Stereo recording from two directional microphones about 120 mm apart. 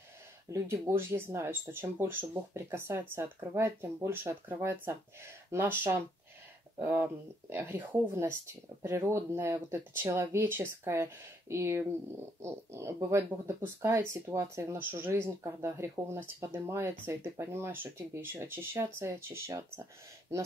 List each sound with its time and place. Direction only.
0.5 s speech: 25° right (ahead or behind)